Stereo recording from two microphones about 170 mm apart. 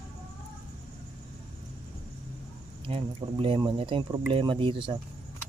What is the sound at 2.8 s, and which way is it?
Speech, 30° right (ahead or behind).